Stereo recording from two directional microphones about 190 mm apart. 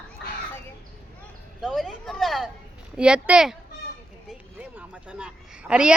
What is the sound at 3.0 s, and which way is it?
Speech, 5° right (ahead or behind).